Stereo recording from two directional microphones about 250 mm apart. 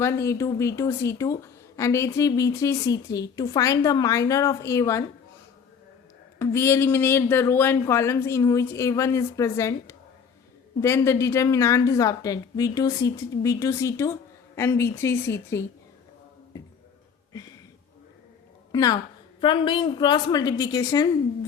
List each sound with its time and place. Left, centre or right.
0.0 s speech: centre
6.4 s speech: centre
18.7 s a woman's voice: centre